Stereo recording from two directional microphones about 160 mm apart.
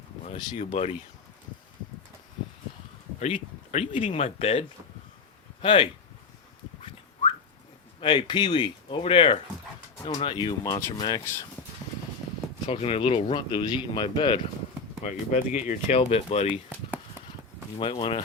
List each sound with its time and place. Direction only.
0.3 s speech: 40° left (ahead or behind)
3.2 s speech: 45° left (ahead or behind)
5.6 s speech: 30° left (ahead or behind)
8.0 s speech: 30° left (ahead or behind)
12.6 s speech: 35° left (ahead or behind)
15.0 s speech: 50° left (ahead or behind)
16.5 s speech: 10° right (ahead or behind)
17.7 s speech: 35° left (ahead or behind)